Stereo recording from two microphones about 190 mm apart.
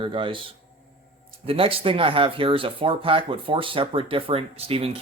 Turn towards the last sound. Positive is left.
turn(degrees=-30)  # may be behind; listen again after turning